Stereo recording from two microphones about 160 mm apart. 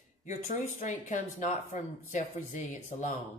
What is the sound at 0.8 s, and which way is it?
Speech, 50° left (ahead or behind).